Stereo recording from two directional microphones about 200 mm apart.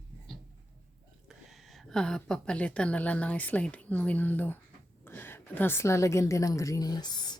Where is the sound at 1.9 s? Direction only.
5° left (ahead or behind); by 7.4 s 20° left (ahead or behind).